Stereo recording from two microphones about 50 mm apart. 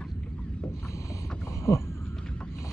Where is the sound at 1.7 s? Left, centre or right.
Left.